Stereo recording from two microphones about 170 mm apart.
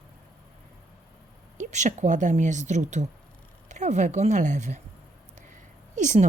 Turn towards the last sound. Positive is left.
turn(degrees=-45)  # may be behind; listen again after turning